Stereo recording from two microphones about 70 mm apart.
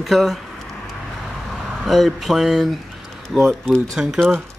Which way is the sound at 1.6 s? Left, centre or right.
Centre.